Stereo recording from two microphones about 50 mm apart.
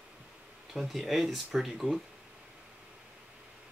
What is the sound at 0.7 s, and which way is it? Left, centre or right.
Speech, centre.